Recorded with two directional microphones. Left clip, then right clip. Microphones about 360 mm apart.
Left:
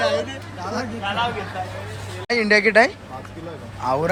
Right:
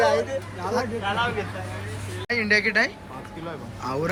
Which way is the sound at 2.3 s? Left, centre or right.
Centre.